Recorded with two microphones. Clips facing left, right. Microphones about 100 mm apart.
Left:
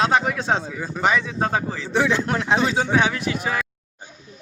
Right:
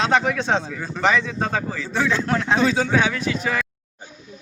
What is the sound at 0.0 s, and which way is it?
A man's voice, 10° left (ahead or behind).